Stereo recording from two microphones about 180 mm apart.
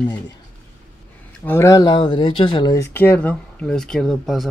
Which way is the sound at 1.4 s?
15° left (ahead or behind).